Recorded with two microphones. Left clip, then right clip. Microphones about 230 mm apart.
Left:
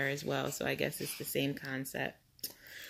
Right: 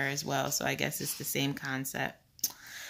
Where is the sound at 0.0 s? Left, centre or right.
Centre.